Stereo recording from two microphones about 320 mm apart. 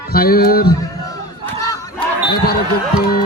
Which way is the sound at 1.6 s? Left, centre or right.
Centre.